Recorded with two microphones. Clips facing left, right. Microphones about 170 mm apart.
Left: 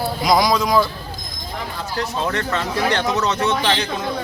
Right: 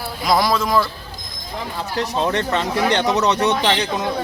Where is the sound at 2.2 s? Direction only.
20° right (ahead or behind).